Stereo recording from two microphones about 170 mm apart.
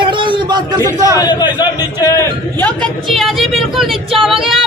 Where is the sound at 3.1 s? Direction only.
Centre (ahead or behind).